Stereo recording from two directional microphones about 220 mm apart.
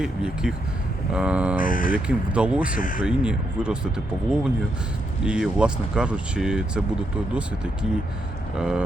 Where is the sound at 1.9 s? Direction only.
5° right (ahead or behind).